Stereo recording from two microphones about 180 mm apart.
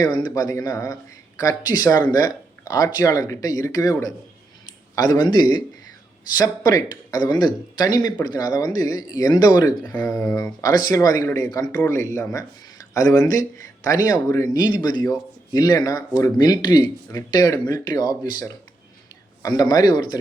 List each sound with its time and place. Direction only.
0.0 s speech: 25° left (ahead or behind)
9.8 s speech: 10° left (ahead or behind)